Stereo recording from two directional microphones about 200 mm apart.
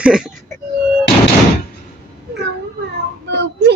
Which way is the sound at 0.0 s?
5° right (ahead or behind).